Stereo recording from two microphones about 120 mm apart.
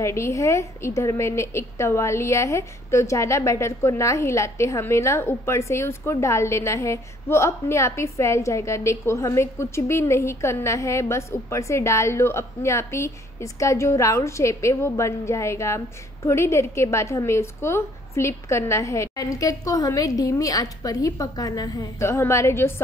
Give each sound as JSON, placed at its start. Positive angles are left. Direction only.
{"t": 0.0, "sound": "a woman's voice", "side_deg": 25}